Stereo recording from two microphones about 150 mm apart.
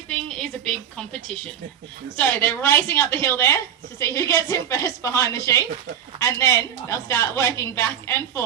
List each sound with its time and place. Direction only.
0.3 s a woman's voice: 5° left (ahead or behind)
2.1 s a woman's voice: 15° left (ahead or behind)